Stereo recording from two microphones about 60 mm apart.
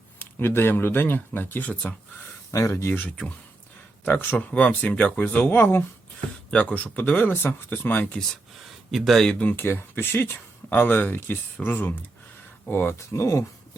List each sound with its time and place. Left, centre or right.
0.2 s speech: left
2.5 s speech: left
4.4 s speech: left
6.5 s speech: left
8.9 s speech: centre
9.3 s speech: left
9.6 s speech: left
13.1 s speech: left